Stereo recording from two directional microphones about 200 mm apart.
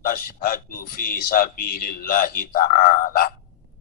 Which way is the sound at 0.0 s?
45° left (ahead or behind).